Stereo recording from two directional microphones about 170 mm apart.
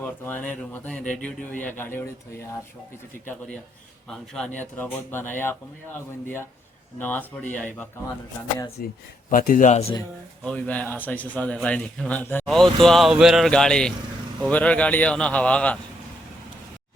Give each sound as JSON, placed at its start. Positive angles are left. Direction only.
{"t": 0.0, "sound": "speech", "side_deg": 10}
{"t": 4.1, "sound": "speech", "side_deg": 5}
{"t": 8.8, "sound": "speech", "side_deg": 55}
{"t": 10.4, "sound": "speech", "side_deg": 5}